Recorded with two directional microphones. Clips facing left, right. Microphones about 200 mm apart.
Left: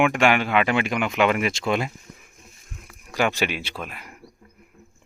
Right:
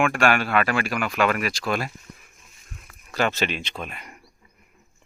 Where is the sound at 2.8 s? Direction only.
15° left (ahead or behind).